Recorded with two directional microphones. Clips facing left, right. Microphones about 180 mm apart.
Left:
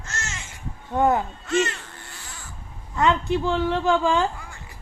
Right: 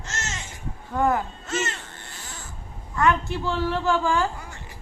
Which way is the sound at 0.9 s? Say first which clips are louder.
Left 2 dB; 20° left (ahead or behind).